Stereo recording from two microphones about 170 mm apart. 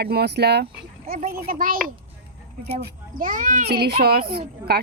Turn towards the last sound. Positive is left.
turn(degrees=-65)  # may be behind; listen again after turning